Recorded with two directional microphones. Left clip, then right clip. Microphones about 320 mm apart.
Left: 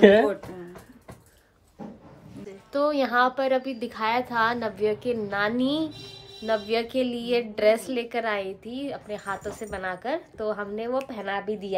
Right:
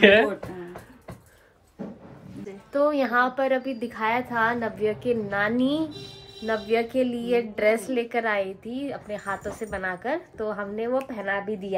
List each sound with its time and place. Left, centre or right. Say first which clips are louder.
2.4 s a woman's voice: right 2 dB; centre